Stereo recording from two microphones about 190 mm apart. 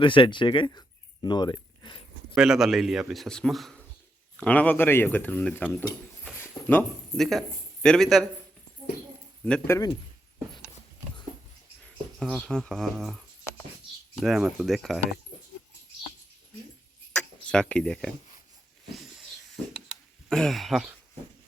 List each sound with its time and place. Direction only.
0.0 s speech: 25° left (ahead or behind)
2.3 s a man's voice: 5° right (ahead or behind)
9.4 s speech: 10° left (ahead or behind)
12.2 s a man's voice: centre (ahead or behind)
17.1 s a sound: 5° left (ahead or behind)
20.3 s a man's voice: centre (ahead or behind)